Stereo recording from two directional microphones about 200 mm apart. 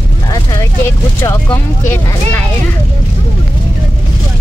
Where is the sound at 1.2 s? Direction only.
10° left (ahead or behind).